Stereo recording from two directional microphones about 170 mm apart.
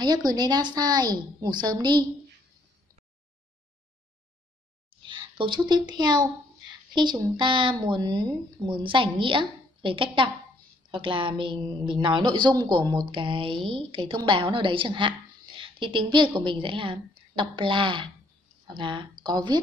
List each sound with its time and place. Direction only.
0.0 s a woman's voice: 25° right (ahead or behind)
5.0 s a woman's voice: 30° right (ahead or behind)